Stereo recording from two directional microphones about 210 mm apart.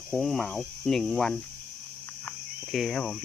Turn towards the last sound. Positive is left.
turn(degrees=5)  # may be behind; listen again after turning